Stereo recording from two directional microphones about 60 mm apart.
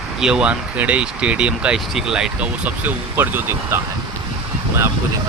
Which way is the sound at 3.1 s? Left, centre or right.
Right.